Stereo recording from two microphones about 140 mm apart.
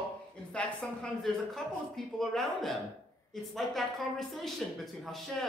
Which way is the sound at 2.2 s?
Centre (ahead or behind).